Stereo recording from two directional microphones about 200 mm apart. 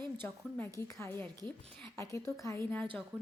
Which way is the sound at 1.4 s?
20° right (ahead or behind).